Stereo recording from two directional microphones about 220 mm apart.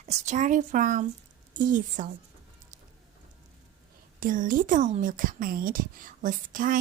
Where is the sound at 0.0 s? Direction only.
30° right (ahead or behind).